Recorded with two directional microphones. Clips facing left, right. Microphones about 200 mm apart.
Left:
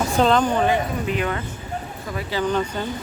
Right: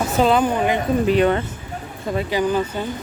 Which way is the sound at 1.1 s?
30° right (ahead or behind).